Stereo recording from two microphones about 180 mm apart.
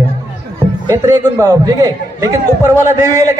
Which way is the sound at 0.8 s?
15° right (ahead or behind).